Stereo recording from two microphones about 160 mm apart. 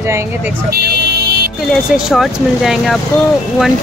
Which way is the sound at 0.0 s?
15° right (ahead or behind).